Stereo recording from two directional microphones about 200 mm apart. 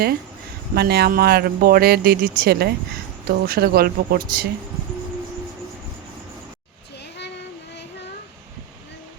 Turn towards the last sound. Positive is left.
turn(degrees=60)  # may be behind; listen again after turning